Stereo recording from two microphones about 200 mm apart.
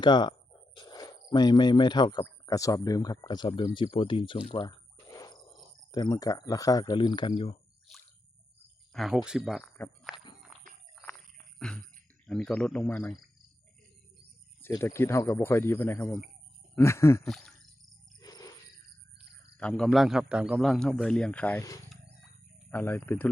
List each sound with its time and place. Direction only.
0.0 s speech: 20° left (ahead or behind)
5.0 s a sound: 20° left (ahead or behind)
5.9 s speech: 20° left (ahead or behind)
8.9 s speech: centre (ahead or behind)
10.1 s walk: centre (ahead or behind)
10.5 s horse: centre (ahead or behind)
11.7 s a man's voice: 5° left (ahead or behind)
14.6 s speech: 15° left (ahead or behind)
17.2 s a man's voice: centre (ahead or behind)
18.2 s wild animals: 20° left (ahead or behind)
19.2 s a sound: 55° right (ahead or behind)
19.5 s a man's voice: 5° left (ahead or behind)